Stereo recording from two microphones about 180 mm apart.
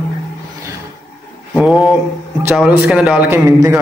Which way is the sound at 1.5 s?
5° right (ahead or behind).